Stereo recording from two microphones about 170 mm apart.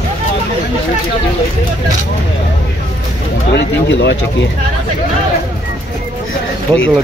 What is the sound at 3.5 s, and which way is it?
Speech, 90° left.